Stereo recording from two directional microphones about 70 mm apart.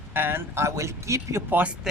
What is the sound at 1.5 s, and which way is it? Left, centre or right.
Speech, right.